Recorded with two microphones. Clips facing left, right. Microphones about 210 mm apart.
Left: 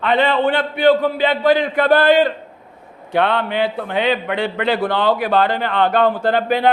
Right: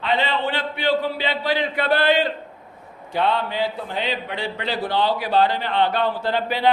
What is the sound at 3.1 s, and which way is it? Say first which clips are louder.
A man's voice: left 4 dB; 60° left (ahead or behind).